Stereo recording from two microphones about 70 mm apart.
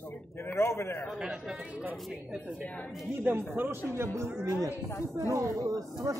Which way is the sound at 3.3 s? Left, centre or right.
Right.